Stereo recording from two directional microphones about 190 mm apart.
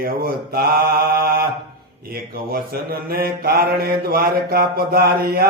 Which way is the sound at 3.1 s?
50° right (ahead or behind).